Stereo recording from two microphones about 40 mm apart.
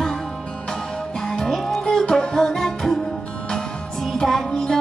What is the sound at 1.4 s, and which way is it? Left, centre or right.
Music, centre.